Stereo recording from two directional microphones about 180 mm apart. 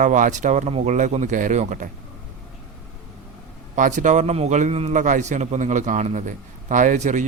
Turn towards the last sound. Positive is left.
turn(degrees=-45)  # may be behind; listen again after turning